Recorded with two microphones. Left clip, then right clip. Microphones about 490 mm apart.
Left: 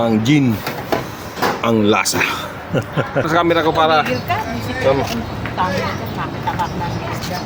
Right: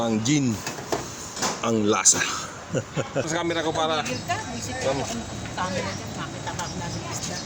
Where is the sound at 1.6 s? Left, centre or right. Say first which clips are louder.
Left 5 dB; right.